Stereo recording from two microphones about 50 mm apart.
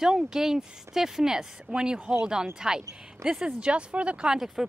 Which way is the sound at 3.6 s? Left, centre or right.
Right.